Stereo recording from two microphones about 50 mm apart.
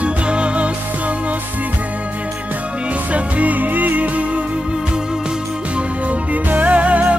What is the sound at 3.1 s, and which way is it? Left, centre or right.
Music, right.